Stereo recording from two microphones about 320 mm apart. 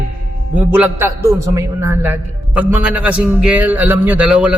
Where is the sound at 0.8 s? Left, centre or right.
Centre.